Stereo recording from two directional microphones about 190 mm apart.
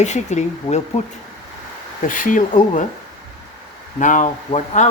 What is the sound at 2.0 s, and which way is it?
Speech, 45° left (ahead or behind).